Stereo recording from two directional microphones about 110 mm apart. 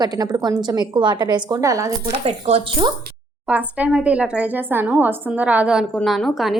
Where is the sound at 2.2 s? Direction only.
70° right (ahead or behind).